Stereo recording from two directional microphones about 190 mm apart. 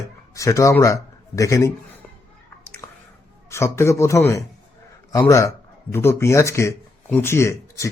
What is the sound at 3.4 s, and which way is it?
Speech, 15° left (ahead or behind).